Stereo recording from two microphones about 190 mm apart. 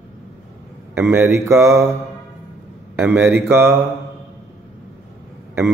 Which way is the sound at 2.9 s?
10° right (ahead or behind).